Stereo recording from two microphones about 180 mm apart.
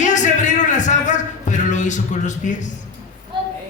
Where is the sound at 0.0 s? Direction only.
40° left (ahead or behind).